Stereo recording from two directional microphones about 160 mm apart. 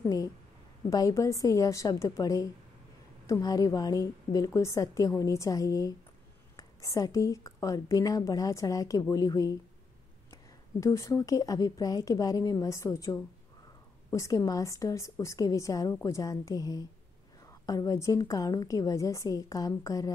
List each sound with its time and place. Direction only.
0.0 s a woman's voice: 20° left (ahead or behind)